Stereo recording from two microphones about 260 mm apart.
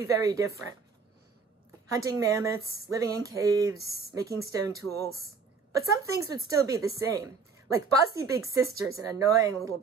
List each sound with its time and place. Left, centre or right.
0.0 s speech: centre
1.9 s speech: centre